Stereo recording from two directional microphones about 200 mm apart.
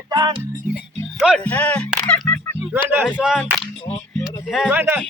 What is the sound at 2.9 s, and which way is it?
Speech, 5° right (ahead or behind).